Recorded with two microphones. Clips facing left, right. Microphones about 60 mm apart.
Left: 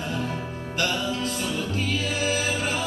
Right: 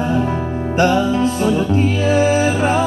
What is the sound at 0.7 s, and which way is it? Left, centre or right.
Music, right.